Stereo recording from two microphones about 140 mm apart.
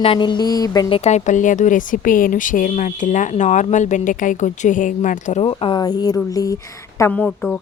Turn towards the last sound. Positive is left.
turn(degrees=5)  # may be behind; listen again after turning